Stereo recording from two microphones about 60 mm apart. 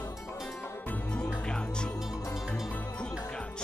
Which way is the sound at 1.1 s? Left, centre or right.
Centre.